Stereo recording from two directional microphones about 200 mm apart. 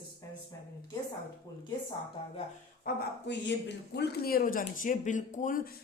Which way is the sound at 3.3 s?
60° left (ahead or behind).